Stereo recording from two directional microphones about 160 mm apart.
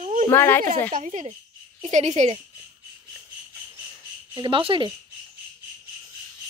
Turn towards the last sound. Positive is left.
turn(degrees=-30)  # may be behind; listen again after turning